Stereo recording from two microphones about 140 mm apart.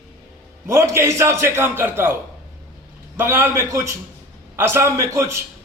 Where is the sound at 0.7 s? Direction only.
20° right (ahead or behind).